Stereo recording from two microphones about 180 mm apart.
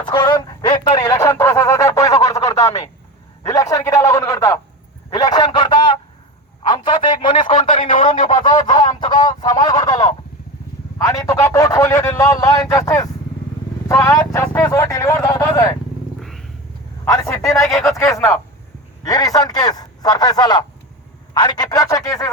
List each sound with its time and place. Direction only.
0.0 s a sound: 25° left (ahead or behind)
6.6 s telephone: 25° left (ahead or behind)
8.0 s speech: 30° left (ahead or behind)
8.4 s a sound: 25° left (ahead or behind)
13.8 s speech: 20° left (ahead or behind)
16.2 s purr: centre (ahead or behind)
17.1 s a man's voice: 15° left (ahead or behind)
17.7 s speech: centre (ahead or behind)
19.0 s a man's voice: 20° left (ahead or behind)